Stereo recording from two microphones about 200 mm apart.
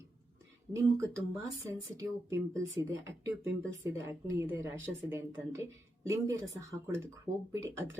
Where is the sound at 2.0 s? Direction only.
15° right (ahead or behind).